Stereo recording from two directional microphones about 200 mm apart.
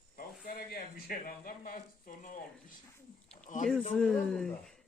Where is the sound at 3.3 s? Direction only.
35° left (ahead or behind).